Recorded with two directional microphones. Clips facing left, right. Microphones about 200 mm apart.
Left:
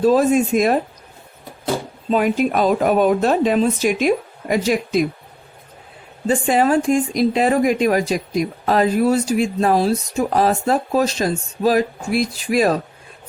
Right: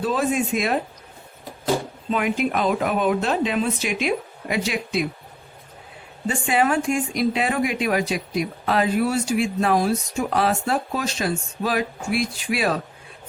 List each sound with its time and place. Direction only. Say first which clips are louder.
0.0 s speech: left 8 dB; 40° left (ahead or behind)
2.0 s speech: left 6 dB; 40° left (ahead or behind)
6.2 s speech: left 5 dB; 40° left (ahead or behind)